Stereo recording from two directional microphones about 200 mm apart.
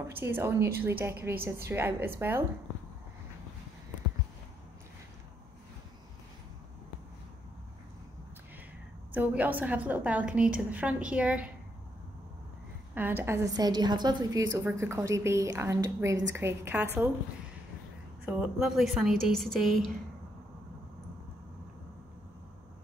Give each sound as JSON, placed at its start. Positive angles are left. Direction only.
{"t": 0.1, "sound": "a woman's voice", "side_deg": -10}
{"t": 9.1, "sound": "a woman's voice", "side_deg": -10}
{"t": 12.9, "sound": "a woman's voice", "side_deg": -10}
{"t": 18.2, "sound": "a woman's voice", "side_deg": -5}